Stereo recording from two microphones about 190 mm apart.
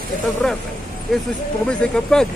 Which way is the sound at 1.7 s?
5° left (ahead or behind).